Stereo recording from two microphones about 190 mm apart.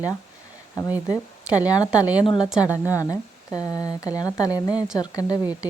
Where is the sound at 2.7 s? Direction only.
15° left (ahead or behind).